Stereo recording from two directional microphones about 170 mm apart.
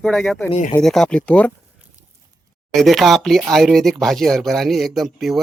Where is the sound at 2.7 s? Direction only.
Centre (ahead or behind).